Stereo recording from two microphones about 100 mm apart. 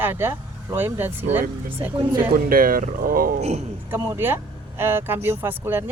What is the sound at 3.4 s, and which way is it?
Speech, 90° right.